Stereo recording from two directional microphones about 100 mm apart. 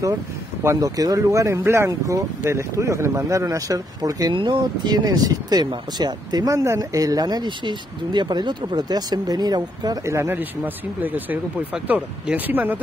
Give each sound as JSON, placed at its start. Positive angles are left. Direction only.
{"t": 0.7, "sound": "speech", "side_deg": -35}
{"t": 4.3, "sound": "speech", "side_deg": -50}
{"t": 10.0, "sound": "speech", "side_deg": -25}